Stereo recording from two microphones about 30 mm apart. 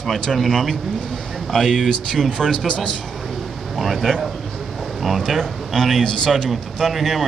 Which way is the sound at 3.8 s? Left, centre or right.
Centre.